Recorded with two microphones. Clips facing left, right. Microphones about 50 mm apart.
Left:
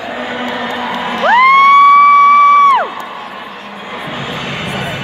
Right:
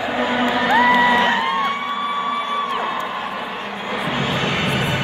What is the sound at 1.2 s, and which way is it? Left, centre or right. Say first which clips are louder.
Music: left 11 dB; left.